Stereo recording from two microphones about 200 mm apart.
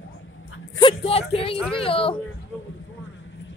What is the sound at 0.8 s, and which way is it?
Speech, 30° left (ahead or behind).